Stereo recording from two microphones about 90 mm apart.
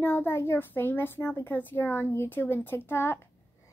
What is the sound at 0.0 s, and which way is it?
A child's voice, 25° left (ahead or behind).